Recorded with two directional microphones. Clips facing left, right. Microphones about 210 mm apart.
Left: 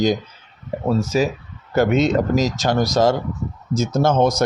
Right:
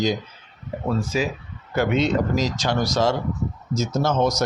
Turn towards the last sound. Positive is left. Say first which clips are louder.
# left 4 dB
turn(degrees=55)  # may be behind; listen again after turning